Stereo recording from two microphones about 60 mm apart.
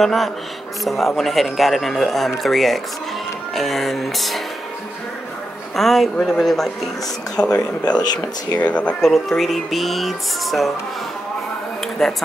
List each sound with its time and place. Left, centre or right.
0.0 s speech: centre
5.8 s speech: centre
7.3 s speech: centre
9.0 s speech: centre
12.0 s speech: centre